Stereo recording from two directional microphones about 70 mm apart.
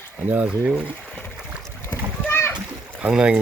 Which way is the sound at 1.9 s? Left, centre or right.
Left.